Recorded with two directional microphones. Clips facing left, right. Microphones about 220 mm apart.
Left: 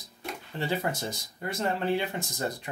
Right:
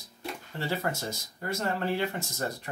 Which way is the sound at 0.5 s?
20° left (ahead or behind).